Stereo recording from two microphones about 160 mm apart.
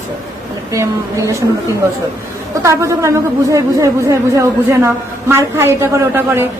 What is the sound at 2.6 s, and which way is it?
Speech, 20° right (ahead or behind).